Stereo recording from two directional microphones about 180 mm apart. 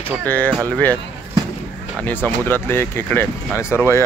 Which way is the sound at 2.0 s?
10° left (ahead or behind).